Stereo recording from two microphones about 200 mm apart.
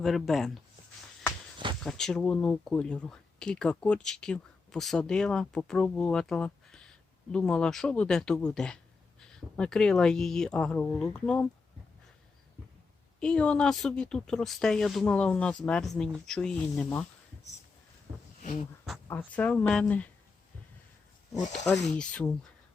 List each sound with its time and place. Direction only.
0.0 s speech: centre (ahead or behind)
1.8 s speech: centre (ahead or behind)
13.1 s speech: 5° left (ahead or behind)
19.0 s speech: 10° left (ahead or behind)
21.3 s speech: 35° left (ahead or behind)
21.8 s speech: 5° left (ahead or behind)